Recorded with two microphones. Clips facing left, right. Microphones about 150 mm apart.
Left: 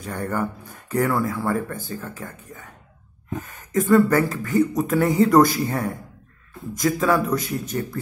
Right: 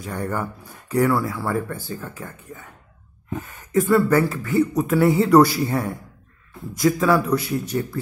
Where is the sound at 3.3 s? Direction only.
45° left (ahead or behind).